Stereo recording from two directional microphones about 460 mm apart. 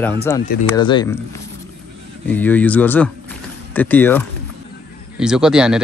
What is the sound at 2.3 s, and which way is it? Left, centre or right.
Speech, centre.